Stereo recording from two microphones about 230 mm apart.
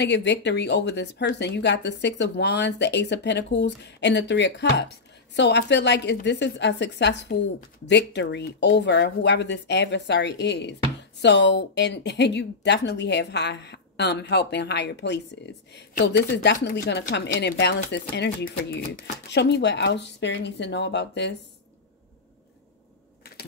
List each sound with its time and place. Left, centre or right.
0.0 s speech: left